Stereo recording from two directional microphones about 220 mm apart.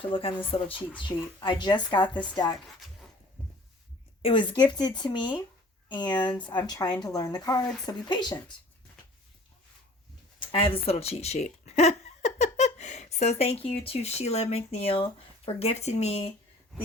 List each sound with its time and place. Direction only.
0.0 s speech: 25° left (ahead or behind)
4.2 s a woman's voice: 25° left (ahead or behind)
10.4 s a sound: 25° left (ahead or behind)
13.4 s speech: 25° left (ahead or behind)